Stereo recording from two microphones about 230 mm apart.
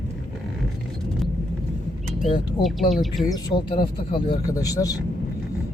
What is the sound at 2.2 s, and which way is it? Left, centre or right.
Speech, left.